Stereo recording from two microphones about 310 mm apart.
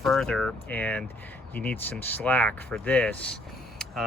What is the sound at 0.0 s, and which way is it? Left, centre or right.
Speech, centre.